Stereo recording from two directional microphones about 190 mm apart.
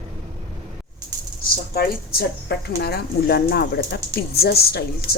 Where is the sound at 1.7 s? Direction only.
55° left (ahead or behind).